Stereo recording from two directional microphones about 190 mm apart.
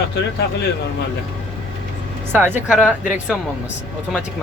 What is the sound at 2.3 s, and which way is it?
Speech, 10° right (ahead or behind).